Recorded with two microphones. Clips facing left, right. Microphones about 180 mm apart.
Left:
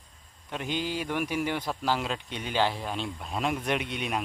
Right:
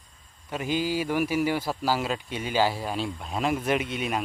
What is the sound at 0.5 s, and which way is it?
Speech, 5° right (ahead or behind).